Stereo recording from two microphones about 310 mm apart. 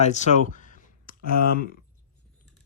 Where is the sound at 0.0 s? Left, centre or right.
Left.